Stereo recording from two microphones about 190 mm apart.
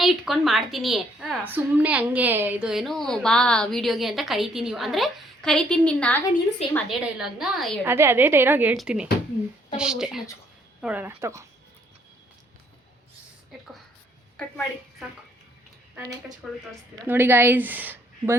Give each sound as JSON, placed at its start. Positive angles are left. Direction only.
{"t": 0.0, "sound": "a woman's voice", "side_deg": 0}
{"t": 6.6, "sound": "a woman's voice", "side_deg": 30}
{"t": 7.0, "sound": "a woman's voice", "side_deg": 0}
{"t": 7.9, "sound": "a woman's voice", "side_deg": -10}
{"t": 14.3, "sound": "a woman's voice", "side_deg": 5}
{"t": 16.4, "sound": "a woman's voice", "side_deg": -5}